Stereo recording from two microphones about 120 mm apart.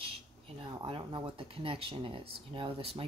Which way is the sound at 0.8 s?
50° right (ahead or behind).